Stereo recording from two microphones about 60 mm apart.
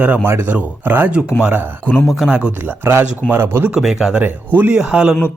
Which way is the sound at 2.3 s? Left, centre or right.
Centre.